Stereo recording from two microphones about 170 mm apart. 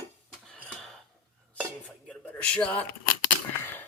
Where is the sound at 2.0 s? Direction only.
5° left (ahead or behind).